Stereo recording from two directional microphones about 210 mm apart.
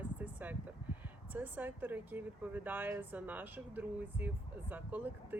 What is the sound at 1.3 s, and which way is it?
Speech, 10° right (ahead or behind).